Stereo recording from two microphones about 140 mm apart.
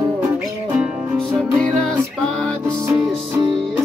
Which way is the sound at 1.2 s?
5° left (ahead or behind).